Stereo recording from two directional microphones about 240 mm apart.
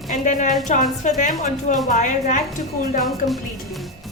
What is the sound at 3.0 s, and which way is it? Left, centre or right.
Speech, centre.